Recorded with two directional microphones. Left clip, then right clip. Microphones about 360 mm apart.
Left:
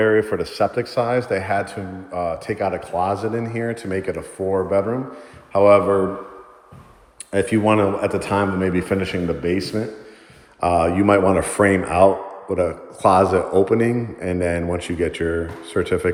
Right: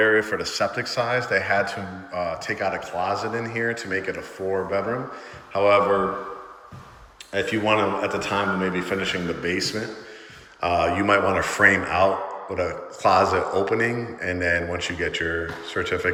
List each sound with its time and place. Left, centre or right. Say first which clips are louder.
0.0 s a man's voice: left 2 dB; centre
7.3 s a man's voice: left 4 dB; centre